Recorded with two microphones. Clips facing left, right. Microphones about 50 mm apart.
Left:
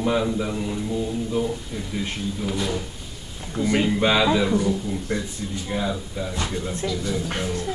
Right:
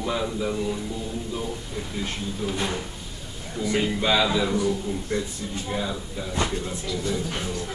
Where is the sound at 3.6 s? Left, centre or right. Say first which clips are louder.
Left 4 dB; left.